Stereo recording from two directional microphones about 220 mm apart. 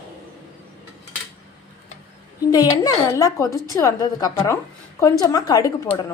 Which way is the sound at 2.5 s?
15° left (ahead or behind).